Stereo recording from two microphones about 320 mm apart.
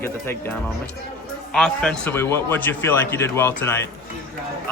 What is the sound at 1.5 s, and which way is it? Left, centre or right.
Speech, centre.